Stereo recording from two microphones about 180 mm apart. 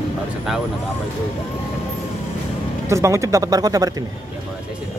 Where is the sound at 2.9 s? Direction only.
15° right (ahead or behind).